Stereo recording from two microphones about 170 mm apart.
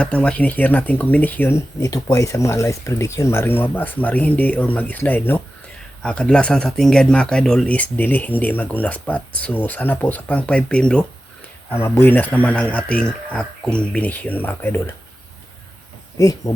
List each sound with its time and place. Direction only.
0.0 s speech: 5° left (ahead or behind)
16.1 s speech: 20° left (ahead or behind)